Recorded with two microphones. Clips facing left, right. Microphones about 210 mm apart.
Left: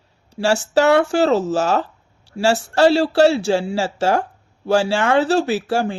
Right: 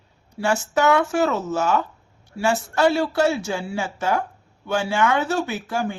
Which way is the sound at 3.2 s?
75° left (ahead or behind).